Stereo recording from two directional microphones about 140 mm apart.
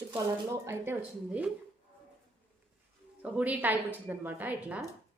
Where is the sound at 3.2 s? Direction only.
10° right (ahead or behind).